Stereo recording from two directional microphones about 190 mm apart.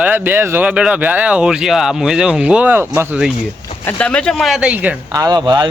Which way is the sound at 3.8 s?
5° left (ahead or behind).